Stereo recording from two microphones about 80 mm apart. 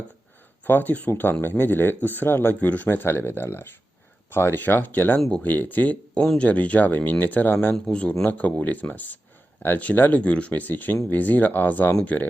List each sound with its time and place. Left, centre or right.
0.6 s speech: left